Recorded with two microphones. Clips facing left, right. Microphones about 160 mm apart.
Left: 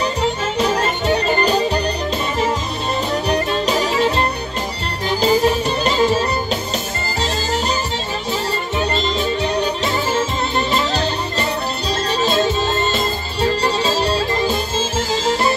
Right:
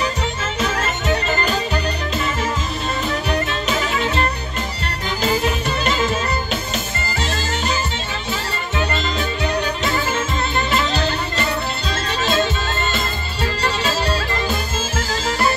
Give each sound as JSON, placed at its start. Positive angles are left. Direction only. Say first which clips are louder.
{"t": 0.0, "sound": "music", "louder": "left 4 dB", "side_deg": 35}
{"t": 3.3, "sound": "music", "louder": "left 3 dB", "side_deg": 35}